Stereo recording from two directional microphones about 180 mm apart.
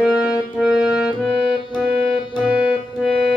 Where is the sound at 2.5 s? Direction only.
5° right (ahead or behind).